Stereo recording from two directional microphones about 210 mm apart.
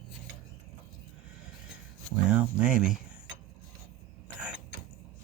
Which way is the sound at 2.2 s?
5° right (ahead or behind).